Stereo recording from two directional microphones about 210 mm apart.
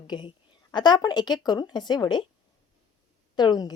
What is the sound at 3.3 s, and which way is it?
Speech, 20° left (ahead or behind).